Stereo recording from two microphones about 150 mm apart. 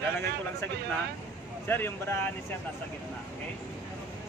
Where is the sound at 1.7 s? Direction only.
15° left (ahead or behind).